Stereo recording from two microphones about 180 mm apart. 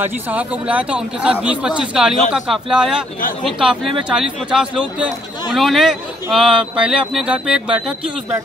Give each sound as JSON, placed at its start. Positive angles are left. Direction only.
{"t": 0.0, "sound": "speech", "side_deg": -10}